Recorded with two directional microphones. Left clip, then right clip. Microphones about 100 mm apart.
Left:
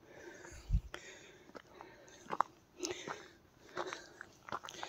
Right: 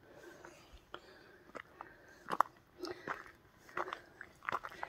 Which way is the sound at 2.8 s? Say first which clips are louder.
Left 3 dB; 35° left (ahead or behind).